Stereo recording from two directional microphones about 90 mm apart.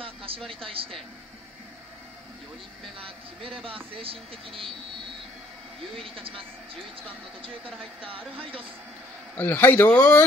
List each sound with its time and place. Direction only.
0.0 s a sound: 90° right
0.7 s speech: 90° right
3.0 s speech: 90° right
6.0 s speech: 85° right
7.4 s speech: 80° right
9.4 s speech: 20° left (ahead or behind)